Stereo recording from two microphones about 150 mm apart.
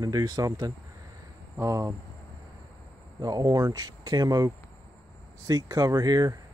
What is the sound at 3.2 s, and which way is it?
Speech, 25° right (ahead or behind).